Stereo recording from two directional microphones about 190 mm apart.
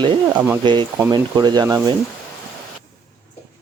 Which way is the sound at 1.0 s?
20° right (ahead or behind).